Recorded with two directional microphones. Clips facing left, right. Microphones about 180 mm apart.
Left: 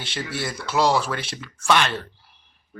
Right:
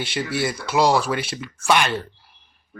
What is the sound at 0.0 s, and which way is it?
Speech, 10° right (ahead or behind).